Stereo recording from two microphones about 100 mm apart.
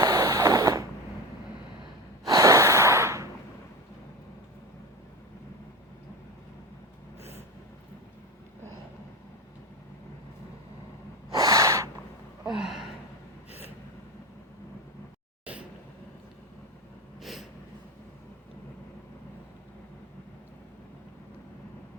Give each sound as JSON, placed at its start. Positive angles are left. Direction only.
{"t": 0.0, "sound": "a sound", "side_deg": -35}
{"t": 2.2, "sound": "gasp", "side_deg": -35}
{"t": 11.3, "sound": "snort", "side_deg": -40}
{"t": 12.5, "sound": "gasp", "side_deg": -5}
{"t": 15.5, "sound": "vehicle", "side_deg": -15}
{"t": 17.2, "sound": "a sound", "side_deg": 0}